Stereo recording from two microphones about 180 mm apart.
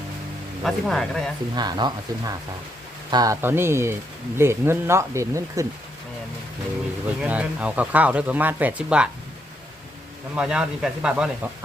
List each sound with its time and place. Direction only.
0.6 s speech: centre (ahead or behind)
1.5 s speech: 25° right (ahead or behind)
7.2 s speech: 5° right (ahead or behind)
10.3 s speech: 5° right (ahead or behind)